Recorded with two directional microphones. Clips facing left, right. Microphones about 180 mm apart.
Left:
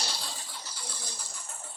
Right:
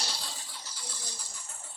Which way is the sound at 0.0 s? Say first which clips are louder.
Left 2 dB; 60° left (ahead or behind).